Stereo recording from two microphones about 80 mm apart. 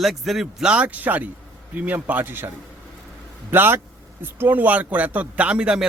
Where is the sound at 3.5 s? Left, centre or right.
Right.